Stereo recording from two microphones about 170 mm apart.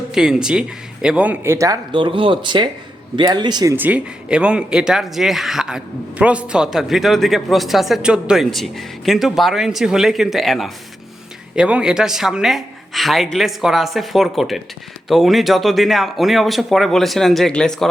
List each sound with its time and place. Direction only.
0.1 s speech: 5° right (ahead or behind); by 3.8 s 25° right (ahead or behind)
3.8 s speech: 10° right (ahead or behind)